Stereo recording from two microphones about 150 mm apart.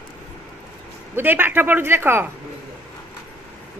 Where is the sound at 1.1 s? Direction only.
15° right (ahead or behind).